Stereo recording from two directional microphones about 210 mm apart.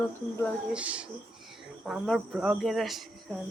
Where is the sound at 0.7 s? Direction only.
5° right (ahead or behind).